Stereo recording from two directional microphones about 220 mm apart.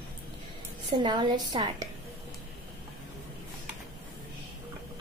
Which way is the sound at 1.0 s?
20° right (ahead or behind).